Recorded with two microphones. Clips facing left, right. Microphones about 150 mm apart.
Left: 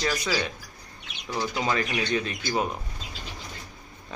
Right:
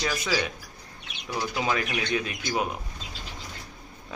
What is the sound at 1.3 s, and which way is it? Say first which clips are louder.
Speech: even; 5° right (ahead or behind).